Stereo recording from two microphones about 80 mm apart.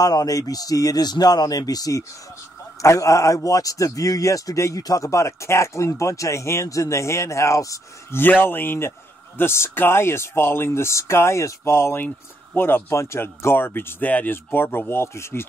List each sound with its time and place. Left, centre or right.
0.0 s speech: left
8.1 s speech: left